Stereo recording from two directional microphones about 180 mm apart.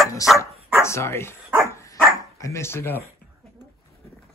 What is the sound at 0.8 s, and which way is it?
Dog, 15° left (ahead or behind).